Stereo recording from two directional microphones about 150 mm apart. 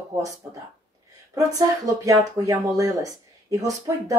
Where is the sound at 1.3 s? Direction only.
25° right (ahead or behind).